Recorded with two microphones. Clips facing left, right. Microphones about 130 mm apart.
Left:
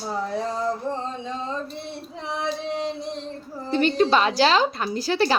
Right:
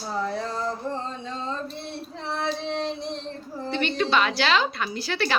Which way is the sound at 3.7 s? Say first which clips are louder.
Left 5 dB; 40° left (ahead or behind).